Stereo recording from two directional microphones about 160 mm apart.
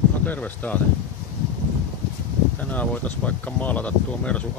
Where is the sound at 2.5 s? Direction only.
10° left (ahead or behind).